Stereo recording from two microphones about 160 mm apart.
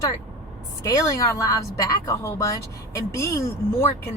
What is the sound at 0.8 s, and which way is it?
A woman's voice, 20° left (ahead or behind).